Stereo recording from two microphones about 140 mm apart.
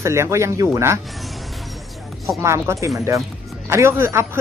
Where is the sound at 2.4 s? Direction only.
20° right (ahead or behind).